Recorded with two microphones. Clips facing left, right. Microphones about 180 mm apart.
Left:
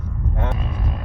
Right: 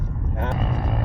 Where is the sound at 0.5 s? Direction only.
45° right (ahead or behind).